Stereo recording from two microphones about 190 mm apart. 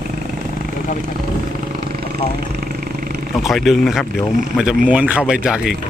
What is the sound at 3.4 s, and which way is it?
Speech, centre (ahead or behind).